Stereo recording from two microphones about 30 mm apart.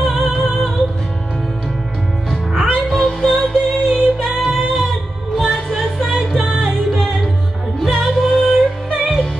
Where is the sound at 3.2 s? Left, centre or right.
Centre.